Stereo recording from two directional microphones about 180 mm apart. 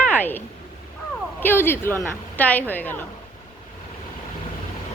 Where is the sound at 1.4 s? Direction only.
10° left (ahead or behind).